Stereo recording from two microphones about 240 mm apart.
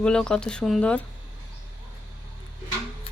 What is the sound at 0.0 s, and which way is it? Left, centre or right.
Speech, centre.